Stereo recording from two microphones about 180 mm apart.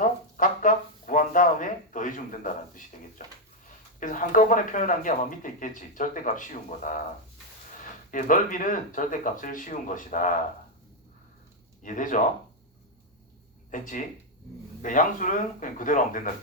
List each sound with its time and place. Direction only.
0.0 s a sound: 45° left (ahead or behind)
3.7 s speech: 45° left (ahead or behind)
8.1 s speech: 45° left (ahead or behind)
11.8 s speech: 45° left (ahead or behind)
13.7 s speech: 45° left (ahead or behind)